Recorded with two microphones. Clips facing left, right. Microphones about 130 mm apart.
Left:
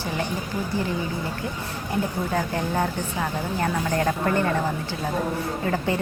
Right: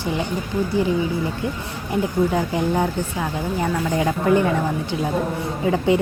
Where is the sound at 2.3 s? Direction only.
15° right (ahead or behind).